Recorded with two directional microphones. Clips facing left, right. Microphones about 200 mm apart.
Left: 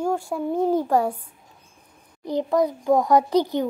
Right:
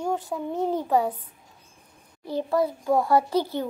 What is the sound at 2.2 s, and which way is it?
A child's voice, 15° left (ahead or behind).